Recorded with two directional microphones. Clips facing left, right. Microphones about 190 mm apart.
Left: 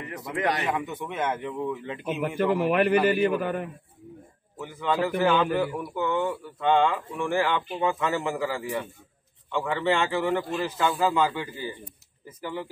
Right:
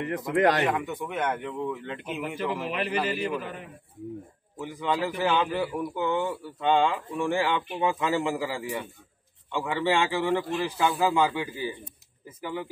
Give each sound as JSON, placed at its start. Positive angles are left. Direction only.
{"t": 0.2, "sound": "speech", "side_deg": 0}
{"t": 2.2, "sound": "a man's voice", "side_deg": 55}
{"t": 4.6, "sound": "speech", "side_deg": -15}